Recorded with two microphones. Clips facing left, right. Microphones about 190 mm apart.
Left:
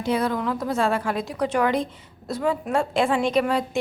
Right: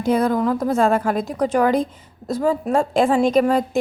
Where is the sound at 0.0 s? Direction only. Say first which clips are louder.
Right 5 dB; 45° right (ahead or behind).